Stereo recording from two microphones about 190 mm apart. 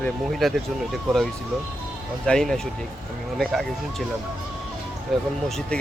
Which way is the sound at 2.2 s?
5° left (ahead or behind).